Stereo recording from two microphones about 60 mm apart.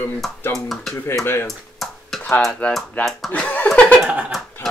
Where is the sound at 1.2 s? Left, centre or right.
Left.